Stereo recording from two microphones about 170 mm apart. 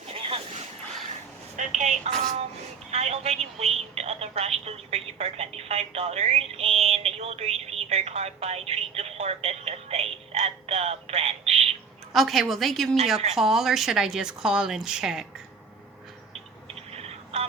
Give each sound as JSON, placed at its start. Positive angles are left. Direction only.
{"t": 0.1, "sound": "a sound", "side_deg": -35}
{"t": 1.5, "sound": "telephone", "side_deg": -45}
{"t": 2.9, "sound": "a woman's voice", "side_deg": -40}
{"t": 12.1, "sound": "a woman's voice", "side_deg": 0}
{"t": 16.9, "sound": "telephone", "side_deg": -35}